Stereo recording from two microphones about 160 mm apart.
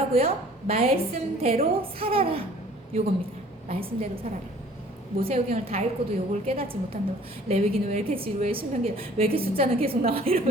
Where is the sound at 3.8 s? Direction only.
65° right (ahead or behind).